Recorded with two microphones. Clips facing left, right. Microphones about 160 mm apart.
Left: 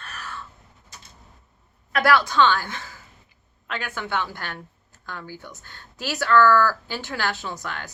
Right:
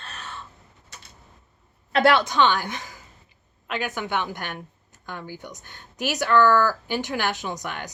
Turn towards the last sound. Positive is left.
turn(degrees=-15)  # may be behind; listen again after turning